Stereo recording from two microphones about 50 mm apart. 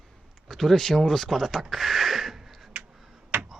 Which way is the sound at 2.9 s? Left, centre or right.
Centre.